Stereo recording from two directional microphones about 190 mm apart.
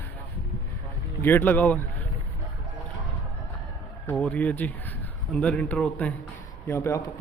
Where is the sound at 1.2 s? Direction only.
10° left (ahead or behind).